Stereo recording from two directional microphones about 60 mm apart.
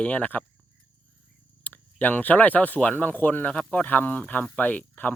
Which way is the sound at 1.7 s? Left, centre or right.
Left.